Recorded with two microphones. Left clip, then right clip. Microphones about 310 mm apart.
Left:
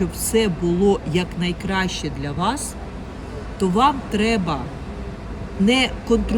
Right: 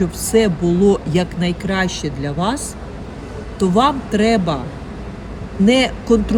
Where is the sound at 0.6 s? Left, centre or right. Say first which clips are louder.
Right 4 dB; right.